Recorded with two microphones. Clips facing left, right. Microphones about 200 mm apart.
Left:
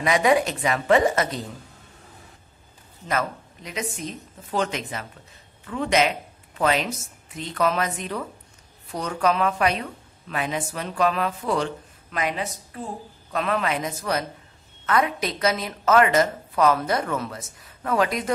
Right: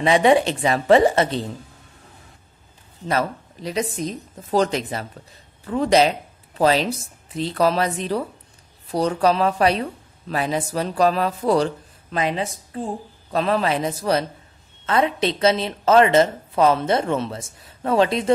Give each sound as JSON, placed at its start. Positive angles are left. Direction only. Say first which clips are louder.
{"t": 0.0, "sound": "a woman's voice", "louder": "right 4 dB", "side_deg": -30}
{"t": 3.1, "sound": "a woman's voice", "louder": "right 4 dB", "side_deg": -35}